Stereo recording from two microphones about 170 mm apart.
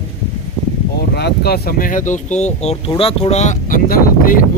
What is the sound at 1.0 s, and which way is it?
Speech, 75° left (ahead or behind).